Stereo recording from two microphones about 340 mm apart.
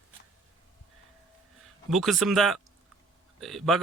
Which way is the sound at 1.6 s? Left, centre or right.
Centre.